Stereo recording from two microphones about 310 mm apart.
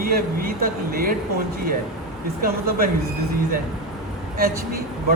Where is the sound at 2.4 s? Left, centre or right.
Right.